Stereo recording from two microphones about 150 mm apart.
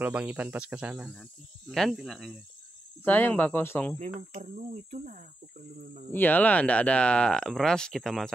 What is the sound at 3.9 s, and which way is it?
Speech, 50° right (ahead or behind).